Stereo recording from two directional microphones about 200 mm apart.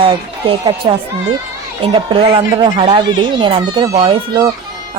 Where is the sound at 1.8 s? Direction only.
25° right (ahead or behind).